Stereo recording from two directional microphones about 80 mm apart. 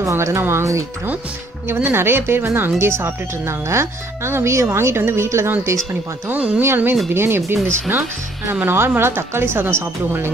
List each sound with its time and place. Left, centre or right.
0.0 s speech: right
6.2 s speech: centre
6.6 s speech: right
8.5 s speech: right